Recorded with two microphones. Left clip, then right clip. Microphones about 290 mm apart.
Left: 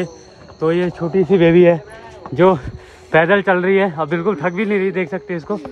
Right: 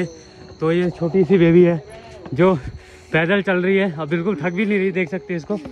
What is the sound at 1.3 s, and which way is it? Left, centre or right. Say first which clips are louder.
Speech: left 4 dB; centre.